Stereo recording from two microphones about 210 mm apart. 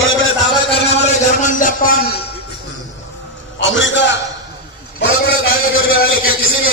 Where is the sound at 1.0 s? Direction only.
40° left (ahead or behind).